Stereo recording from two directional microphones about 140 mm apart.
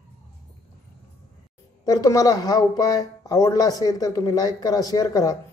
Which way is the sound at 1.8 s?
25° left (ahead or behind).